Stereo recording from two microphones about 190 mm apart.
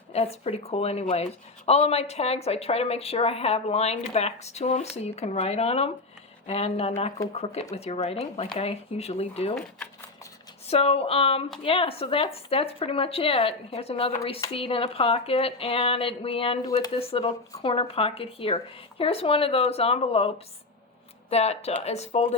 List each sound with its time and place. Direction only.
0.1 s speech: 30° left (ahead or behind)
9.6 s speech: 5° left (ahead or behind)
10.7 s speech: 30° left (ahead or behind)